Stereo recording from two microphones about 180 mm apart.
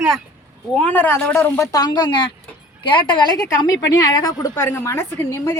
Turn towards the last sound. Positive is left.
turn(degrees=15)  # may be behind; listen again after turning